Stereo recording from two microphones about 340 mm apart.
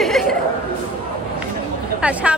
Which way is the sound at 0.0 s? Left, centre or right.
Centre.